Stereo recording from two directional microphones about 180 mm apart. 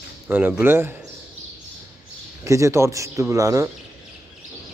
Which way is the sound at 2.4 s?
15° right (ahead or behind).